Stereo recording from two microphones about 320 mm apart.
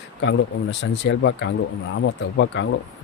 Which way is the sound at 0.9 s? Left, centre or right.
Left.